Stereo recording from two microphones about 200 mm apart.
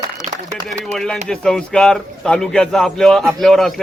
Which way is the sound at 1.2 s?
5° left (ahead or behind).